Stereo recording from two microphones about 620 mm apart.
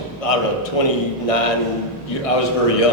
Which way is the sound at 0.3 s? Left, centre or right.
Left.